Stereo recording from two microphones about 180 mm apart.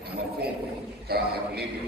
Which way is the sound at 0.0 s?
60° right (ahead or behind).